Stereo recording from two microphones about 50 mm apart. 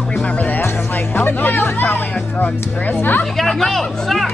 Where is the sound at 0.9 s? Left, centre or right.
Left.